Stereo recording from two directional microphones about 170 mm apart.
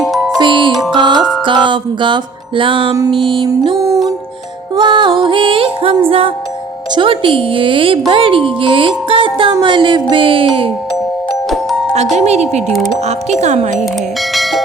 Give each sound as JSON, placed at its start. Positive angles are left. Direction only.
{"t": 0.0, "sound": "music", "side_deg": 0}
{"t": 0.3, "sound": "music", "side_deg": -30}
{"t": 6.9, "sound": "a woman's voice", "side_deg": -30}
{"t": 12.1, "sound": "a woman's voice", "side_deg": -40}
{"t": 12.6, "sound": "speech", "side_deg": 0}
{"t": 13.1, "sound": "a woman's voice", "side_deg": -40}
{"t": 14.3, "sound": "bell", "side_deg": 0}